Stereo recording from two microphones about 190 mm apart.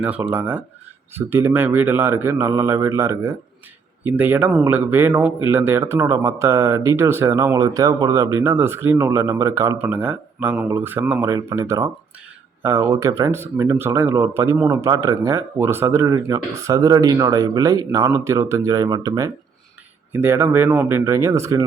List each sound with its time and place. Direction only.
0.0 s speech: 10° right (ahead or behind)